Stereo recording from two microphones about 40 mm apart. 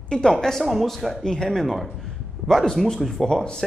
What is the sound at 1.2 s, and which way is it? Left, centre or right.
Speech, centre.